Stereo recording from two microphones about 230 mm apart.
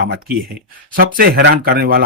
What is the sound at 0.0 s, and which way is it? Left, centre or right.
Speech, right.